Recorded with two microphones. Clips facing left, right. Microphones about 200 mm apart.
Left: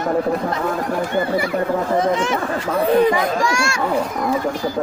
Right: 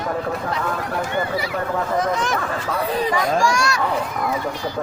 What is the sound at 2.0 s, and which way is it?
Speech, 25° left (ahead or behind).